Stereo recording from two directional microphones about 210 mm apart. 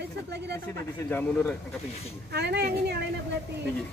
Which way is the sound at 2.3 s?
50° right (ahead or behind).